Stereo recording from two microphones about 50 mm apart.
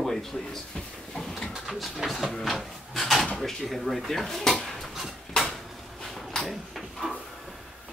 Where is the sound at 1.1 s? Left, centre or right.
Centre.